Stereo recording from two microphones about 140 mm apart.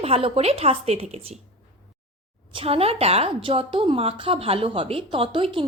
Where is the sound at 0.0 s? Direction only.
45° right (ahead or behind).